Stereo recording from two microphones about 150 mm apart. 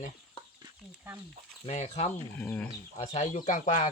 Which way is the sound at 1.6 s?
50° left (ahead or behind).